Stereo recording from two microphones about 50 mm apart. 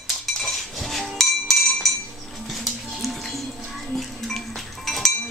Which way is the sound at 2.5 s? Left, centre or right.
Centre.